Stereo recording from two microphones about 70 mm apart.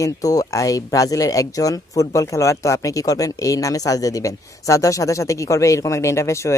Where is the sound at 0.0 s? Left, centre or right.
Left.